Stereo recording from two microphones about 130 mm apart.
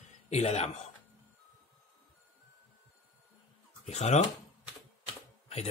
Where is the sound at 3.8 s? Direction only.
60° left (ahead or behind).